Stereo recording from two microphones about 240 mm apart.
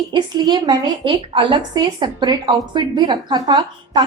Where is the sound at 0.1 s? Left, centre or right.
Centre.